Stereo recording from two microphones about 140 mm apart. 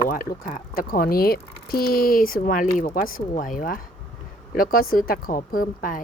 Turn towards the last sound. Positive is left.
turn(degrees=80)